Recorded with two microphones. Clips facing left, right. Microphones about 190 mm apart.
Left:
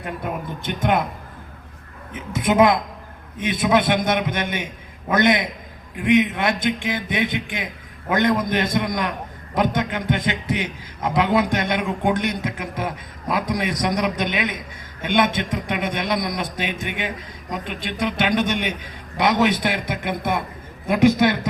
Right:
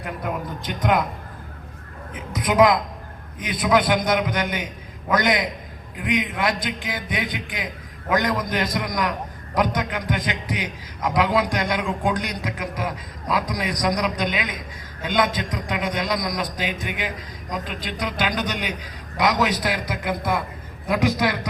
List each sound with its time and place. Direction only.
0.6 s a man's voice: 25° left (ahead or behind)
2.1 s a man's voice: 25° left (ahead or behind)